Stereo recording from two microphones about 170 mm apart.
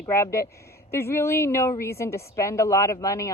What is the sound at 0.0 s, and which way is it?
A woman's voice, 15° left (ahead or behind).